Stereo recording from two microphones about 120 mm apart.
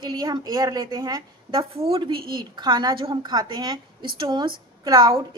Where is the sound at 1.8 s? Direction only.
45° right (ahead or behind).